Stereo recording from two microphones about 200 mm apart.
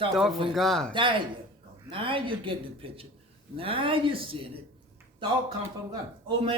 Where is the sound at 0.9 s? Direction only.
25° right (ahead or behind).